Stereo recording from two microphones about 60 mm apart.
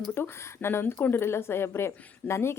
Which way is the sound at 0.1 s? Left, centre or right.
Left.